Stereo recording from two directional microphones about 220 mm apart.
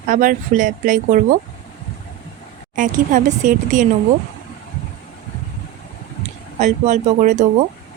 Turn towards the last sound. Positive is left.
turn(degrees=-35)  # may be behind; listen again after turning